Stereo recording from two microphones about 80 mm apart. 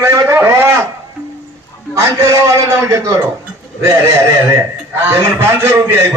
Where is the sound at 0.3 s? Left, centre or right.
Right.